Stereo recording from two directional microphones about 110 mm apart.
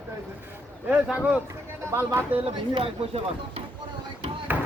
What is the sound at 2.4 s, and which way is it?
Speech, 50° right (ahead or behind).